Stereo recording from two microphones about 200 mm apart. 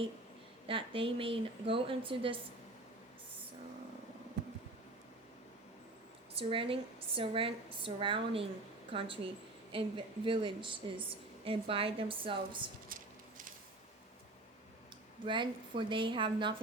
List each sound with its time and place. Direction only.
0.7 s a woman's voice: 25° right (ahead or behind)
6.5 s a woman's voice: 25° right (ahead or behind)
12.9 s a sound: 40° right (ahead or behind)
15.3 s a woman's voice: 25° right (ahead or behind)